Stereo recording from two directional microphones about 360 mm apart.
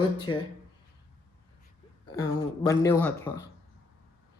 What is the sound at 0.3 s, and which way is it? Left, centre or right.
Speech, left.